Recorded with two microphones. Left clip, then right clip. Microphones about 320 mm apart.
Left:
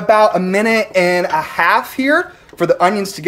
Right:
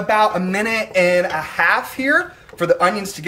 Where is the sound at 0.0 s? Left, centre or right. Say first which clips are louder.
Left 5 dB; centre.